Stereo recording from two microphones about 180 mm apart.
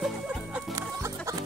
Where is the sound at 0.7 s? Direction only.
15° right (ahead or behind).